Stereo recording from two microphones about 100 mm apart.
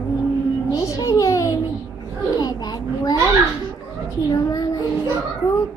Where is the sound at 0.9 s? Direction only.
35° left (ahead or behind).